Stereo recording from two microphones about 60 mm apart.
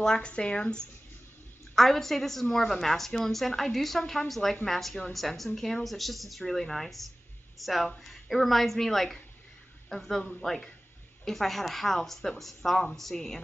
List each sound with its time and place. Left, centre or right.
0.0 s speech: centre
1.8 s a woman's voice: centre